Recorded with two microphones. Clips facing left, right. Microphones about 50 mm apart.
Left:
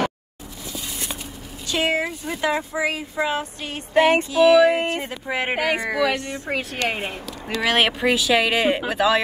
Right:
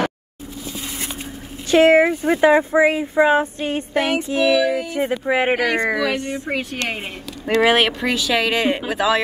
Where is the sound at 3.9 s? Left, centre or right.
Left.